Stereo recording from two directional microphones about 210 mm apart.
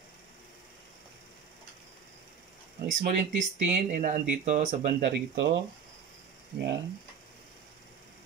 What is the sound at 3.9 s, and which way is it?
Speech, 40° right (ahead or behind).